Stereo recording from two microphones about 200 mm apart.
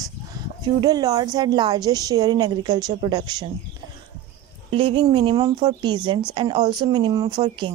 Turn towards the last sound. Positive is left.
turn(degrees=-25)  # may be behind; listen again after turning